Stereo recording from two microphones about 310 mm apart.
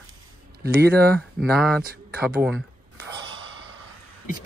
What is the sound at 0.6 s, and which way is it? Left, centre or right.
Speech, right.